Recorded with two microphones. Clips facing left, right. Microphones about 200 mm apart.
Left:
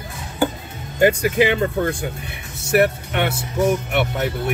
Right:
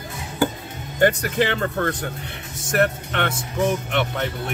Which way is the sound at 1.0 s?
10° left (ahead or behind).